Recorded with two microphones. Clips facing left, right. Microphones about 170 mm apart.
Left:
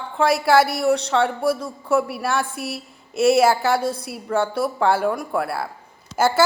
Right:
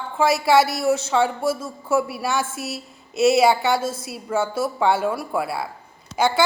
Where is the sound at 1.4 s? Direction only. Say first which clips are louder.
Left 2 dB; 25° right (ahead or behind).